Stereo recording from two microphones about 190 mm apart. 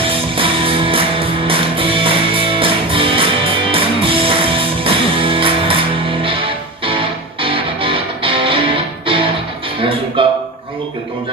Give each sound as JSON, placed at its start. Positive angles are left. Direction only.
{"t": 0.0, "sound": "music", "side_deg": -30}
{"t": 7.4, "sound": "music", "side_deg": -30}
{"t": 10.2, "sound": "a sound", "side_deg": -25}